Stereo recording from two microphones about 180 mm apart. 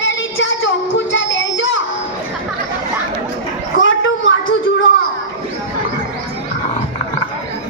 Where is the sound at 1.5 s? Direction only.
90° left.